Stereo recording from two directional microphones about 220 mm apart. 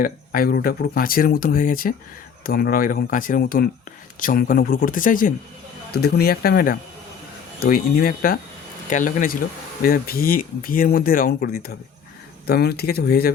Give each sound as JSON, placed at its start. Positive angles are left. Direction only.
{"t": 0.0, "sound": "speech", "side_deg": 40}